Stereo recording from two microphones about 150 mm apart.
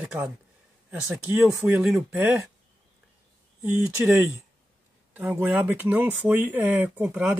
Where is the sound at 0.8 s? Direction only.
5° right (ahead or behind).